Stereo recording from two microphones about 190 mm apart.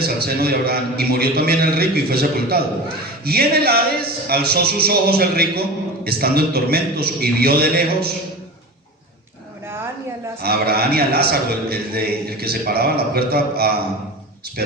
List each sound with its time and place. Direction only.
0.0 s a man's voice: 55° right (ahead or behind)
9.6 s a sound: 10° right (ahead or behind)
10.4 s a man's voice: 55° right (ahead or behind)